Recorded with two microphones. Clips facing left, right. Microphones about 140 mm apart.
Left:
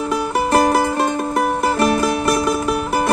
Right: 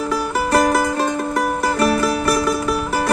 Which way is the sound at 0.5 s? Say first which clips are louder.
Left 1 dB; 25° left (ahead or behind).